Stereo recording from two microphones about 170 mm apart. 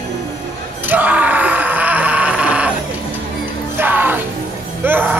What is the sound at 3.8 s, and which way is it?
Music, 10° right (ahead or behind).